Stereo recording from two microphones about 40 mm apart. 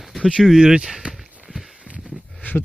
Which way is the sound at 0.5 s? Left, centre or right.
Right.